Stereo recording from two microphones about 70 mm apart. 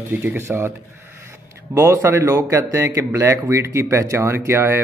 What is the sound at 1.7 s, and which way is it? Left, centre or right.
A man's voice, right.